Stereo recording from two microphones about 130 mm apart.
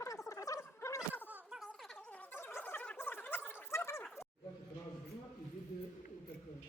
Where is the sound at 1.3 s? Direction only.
10° right (ahead or behind).